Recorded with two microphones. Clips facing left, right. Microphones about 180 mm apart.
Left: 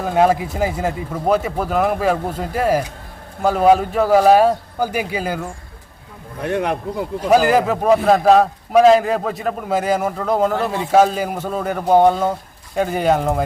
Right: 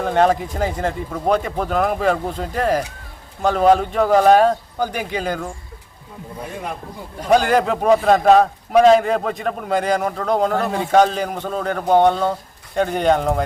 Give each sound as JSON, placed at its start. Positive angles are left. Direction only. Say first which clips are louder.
{"t": 0.0, "sound": "speech", "louder": "left 1 dB", "side_deg": 5}
{"t": 6.4, "sound": "speech", "louder": "left 9 dB", "side_deg": 75}
{"t": 7.3, "sound": "a man's voice", "louder": "left 1 dB", "side_deg": 5}